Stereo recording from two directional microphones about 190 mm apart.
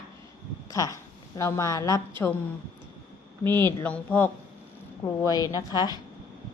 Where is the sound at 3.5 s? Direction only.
10° left (ahead or behind).